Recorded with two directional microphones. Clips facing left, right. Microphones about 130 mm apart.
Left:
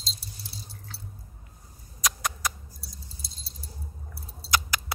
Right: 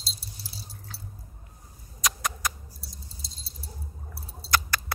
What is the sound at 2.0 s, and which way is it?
Rodents, centre (ahead or behind).